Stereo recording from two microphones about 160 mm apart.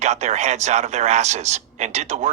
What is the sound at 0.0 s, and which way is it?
Speech, 45° right (ahead or behind).